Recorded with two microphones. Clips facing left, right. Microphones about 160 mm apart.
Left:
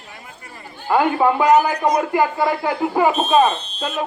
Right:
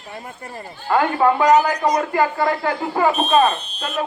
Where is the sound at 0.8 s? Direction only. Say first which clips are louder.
Even; 10° left (ahead or behind).